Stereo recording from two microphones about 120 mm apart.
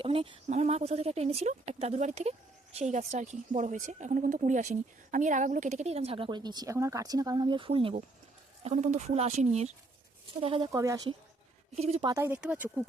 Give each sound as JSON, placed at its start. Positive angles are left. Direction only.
{"t": 0.0, "sound": "speech", "side_deg": -50}
{"t": 0.4, "sound": "speech", "side_deg": -70}
{"t": 8.6, "sound": "speech", "side_deg": -75}
{"t": 10.4, "sound": "speech", "side_deg": -50}
{"t": 10.7, "sound": "speech", "side_deg": -25}
{"t": 11.8, "sound": "speech", "side_deg": -60}
{"t": 12.0, "sound": "speech", "side_deg": -25}
{"t": 12.4, "sound": "speech", "side_deg": -10}